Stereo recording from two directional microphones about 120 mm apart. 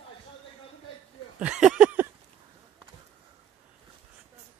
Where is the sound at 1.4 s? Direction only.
5° right (ahead or behind).